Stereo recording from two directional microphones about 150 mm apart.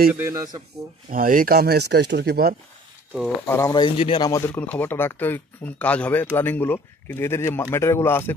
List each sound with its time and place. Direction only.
0.1 s a man's voice: 15° right (ahead or behind)
1.1 s speech: 70° right (ahead or behind); by 2.5 s 90° right
3.4 s speech: 15° left (ahead or behind)
3.7 s speech: 35° left (ahead or behind)
4.3 s speech: 15° left (ahead or behind)